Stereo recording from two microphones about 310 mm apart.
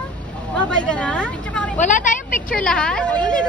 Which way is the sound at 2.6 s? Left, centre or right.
Centre.